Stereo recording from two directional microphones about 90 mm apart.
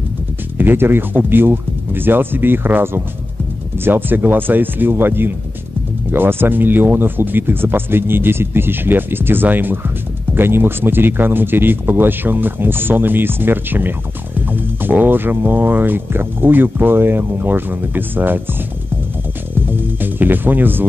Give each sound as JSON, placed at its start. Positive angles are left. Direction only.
{"t": 0.6, "sound": "speech", "side_deg": -25}
{"t": 19.5, "sound": "music", "side_deg": -20}